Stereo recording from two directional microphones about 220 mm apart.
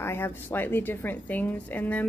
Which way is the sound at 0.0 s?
10° left (ahead or behind).